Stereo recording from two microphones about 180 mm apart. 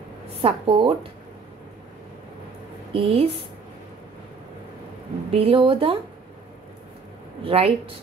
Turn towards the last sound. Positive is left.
turn(degrees=-35)  # may be behind; listen again after turning